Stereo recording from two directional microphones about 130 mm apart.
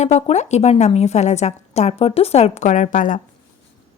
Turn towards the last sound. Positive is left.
turn(degrees=80)